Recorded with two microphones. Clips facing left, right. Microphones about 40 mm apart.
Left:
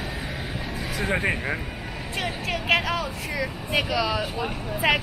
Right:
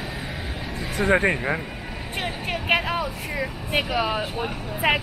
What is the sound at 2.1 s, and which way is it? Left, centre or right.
Speech, right.